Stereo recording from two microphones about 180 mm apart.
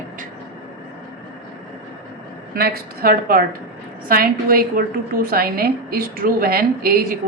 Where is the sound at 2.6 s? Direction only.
55° right (ahead or behind).